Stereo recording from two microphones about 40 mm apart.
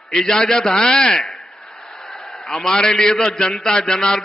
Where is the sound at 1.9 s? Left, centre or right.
Centre.